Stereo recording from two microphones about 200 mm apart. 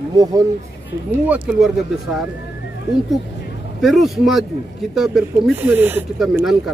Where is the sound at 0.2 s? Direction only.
20° right (ahead or behind).